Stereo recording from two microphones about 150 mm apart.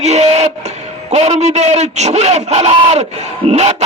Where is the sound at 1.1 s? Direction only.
45° right (ahead or behind).